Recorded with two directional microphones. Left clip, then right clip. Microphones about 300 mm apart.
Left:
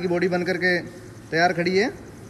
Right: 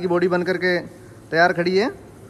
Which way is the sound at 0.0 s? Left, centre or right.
Right.